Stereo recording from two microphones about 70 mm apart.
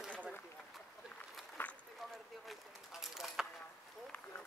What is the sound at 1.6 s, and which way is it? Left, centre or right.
Run, left.